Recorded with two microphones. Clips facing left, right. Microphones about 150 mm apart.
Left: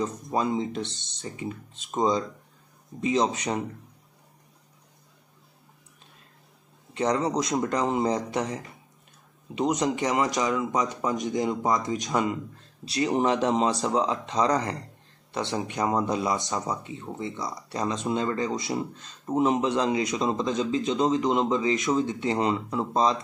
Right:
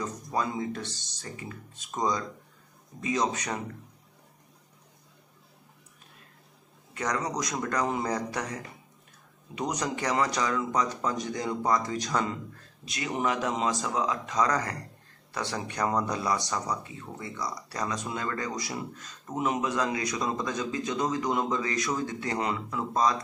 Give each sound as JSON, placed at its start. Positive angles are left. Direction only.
{"t": 0.0, "sound": "speech", "side_deg": 25}
{"t": 6.9, "sound": "speech", "side_deg": 25}
{"t": 9.6, "sound": "speech", "side_deg": 25}
{"t": 12.8, "sound": "speech", "side_deg": 35}